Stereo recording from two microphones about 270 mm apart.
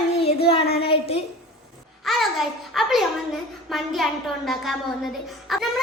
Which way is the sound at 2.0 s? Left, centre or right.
Centre.